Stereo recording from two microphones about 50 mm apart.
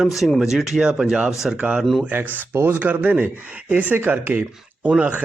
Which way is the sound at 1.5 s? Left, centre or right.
Right.